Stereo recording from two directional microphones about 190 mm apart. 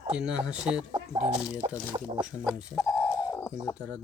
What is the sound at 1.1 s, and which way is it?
Speech, 35° right (ahead or behind).